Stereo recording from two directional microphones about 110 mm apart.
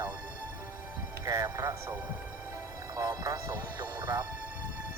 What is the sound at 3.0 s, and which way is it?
Speech, 35° right (ahead or behind).